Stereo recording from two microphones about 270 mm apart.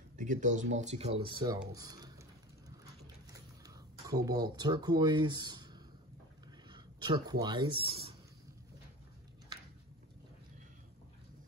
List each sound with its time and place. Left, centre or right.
0.2 s speech: right
3.3 s speech: centre